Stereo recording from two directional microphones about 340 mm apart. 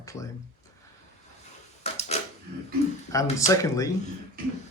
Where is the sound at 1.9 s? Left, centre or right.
Centre.